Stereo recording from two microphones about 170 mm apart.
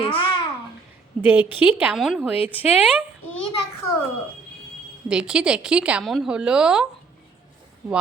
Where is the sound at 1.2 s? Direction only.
10° right (ahead or behind).